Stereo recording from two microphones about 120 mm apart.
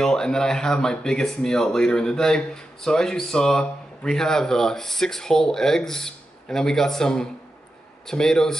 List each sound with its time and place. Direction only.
0.0 s speech: 5° left (ahead or behind)